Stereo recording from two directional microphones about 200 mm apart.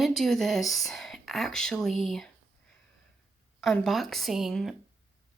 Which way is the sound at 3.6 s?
Centre (ahead or behind).